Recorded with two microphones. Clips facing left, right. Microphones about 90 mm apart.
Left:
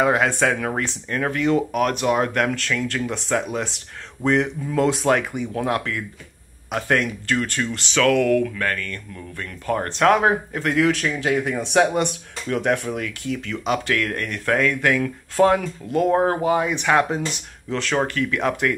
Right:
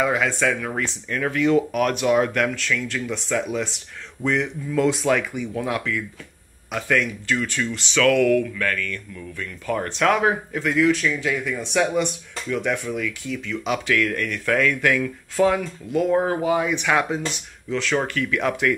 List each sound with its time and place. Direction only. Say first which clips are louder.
0.0 s speech: left 3 dB; 55° left (ahead or behind)
0.7 s speech: left 1 dB; 35° left (ahead or behind)
2.9 s speech: left 2 dB; 50° left (ahead or behind)
4.2 s speech: left 3 dB; 35° left (ahead or behind)
8.0 s speech: even; 35° left (ahead or behind)
15.3 s speech: left 2 dB; 45° left (ahead or behind)